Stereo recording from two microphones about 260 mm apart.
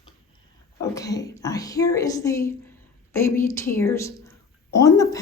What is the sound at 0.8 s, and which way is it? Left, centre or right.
A woman's voice, centre.